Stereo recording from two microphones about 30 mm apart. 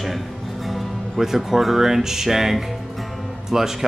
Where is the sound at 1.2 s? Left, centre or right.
Centre.